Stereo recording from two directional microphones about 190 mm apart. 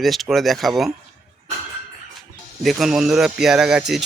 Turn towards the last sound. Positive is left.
turn(degrees=0)  # may be behind; listen again after turning